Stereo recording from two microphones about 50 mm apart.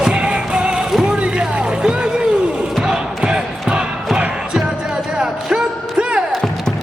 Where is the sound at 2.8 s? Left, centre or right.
Centre.